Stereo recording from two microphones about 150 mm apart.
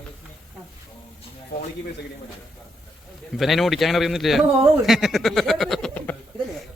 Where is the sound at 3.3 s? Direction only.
Centre (ahead or behind).